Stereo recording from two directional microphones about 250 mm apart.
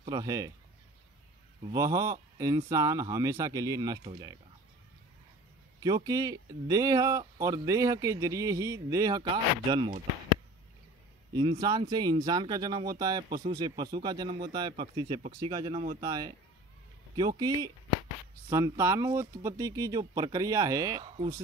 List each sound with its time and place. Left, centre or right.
0.0 s speech: centre
1.7 s speech: centre
5.8 s speech: centre
11.3 s speech: centre